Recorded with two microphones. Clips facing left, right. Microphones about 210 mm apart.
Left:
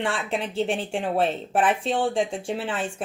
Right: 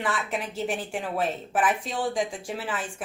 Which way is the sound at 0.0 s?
30° left (ahead or behind).